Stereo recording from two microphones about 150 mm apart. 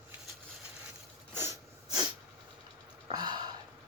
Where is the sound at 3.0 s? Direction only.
30° right (ahead or behind).